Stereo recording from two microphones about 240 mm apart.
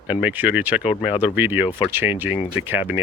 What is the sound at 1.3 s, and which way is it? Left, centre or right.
Speech, centre.